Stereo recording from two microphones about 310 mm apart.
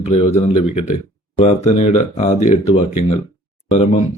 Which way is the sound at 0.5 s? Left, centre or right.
Left.